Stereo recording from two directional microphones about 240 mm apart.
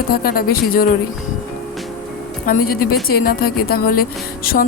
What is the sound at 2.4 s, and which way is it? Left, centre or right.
A woman's voice, left.